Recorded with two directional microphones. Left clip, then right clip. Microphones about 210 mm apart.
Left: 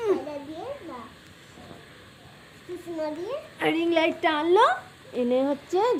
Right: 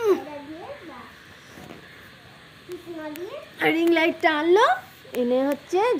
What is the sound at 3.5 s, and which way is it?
A woman's voice, 40° right (ahead or behind).